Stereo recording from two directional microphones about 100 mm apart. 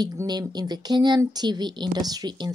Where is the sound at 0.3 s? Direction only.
45° right (ahead or behind).